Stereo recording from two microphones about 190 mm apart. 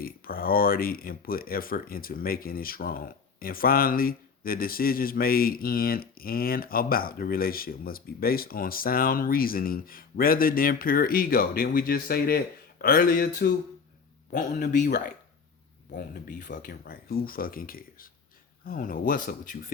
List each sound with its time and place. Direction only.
0.0 s speech: 50° left (ahead or behind)